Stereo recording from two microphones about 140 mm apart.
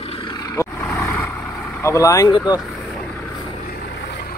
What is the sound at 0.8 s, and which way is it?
Vehicle, 15° left (ahead or behind).